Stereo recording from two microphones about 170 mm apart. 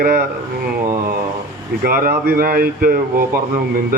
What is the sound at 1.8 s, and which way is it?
Speech, 60° right (ahead or behind).